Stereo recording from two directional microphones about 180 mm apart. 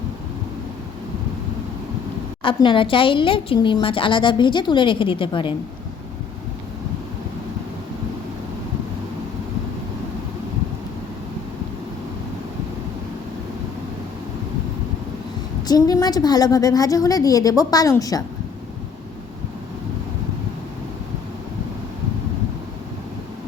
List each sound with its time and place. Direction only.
2.4 s a woman's voice: 30° left (ahead or behind)
15.6 s a woman's voice: 20° left (ahead or behind)